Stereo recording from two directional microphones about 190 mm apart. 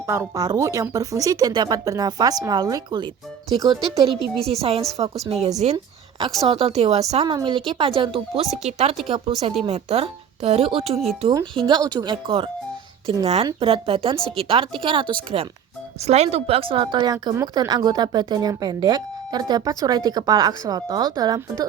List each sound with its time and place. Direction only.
0.1 s speech: 15° right (ahead or behind)
5.7 s a sound: 25° right (ahead or behind)
6.5 s a woman's voice: 30° right (ahead or behind)